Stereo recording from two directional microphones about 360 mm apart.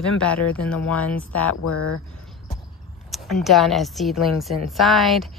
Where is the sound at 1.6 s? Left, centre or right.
Left.